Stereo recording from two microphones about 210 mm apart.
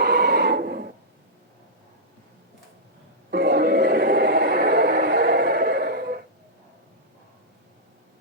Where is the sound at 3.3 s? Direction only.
50° right (ahead or behind).